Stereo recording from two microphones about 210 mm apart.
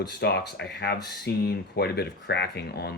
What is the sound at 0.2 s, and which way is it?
Speech, 50° left (ahead or behind).